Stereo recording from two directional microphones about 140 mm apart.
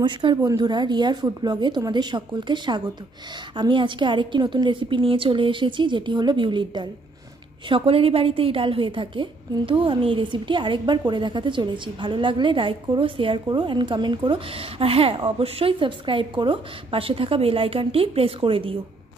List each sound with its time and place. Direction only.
0.0 s a woman's voice: 35° right (ahead or behind)